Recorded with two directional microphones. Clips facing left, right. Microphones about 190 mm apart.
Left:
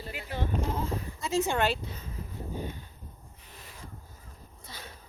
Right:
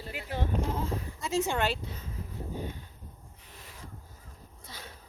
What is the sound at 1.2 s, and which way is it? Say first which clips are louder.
Speech: left 2 dB; 40° left (ahead or behind).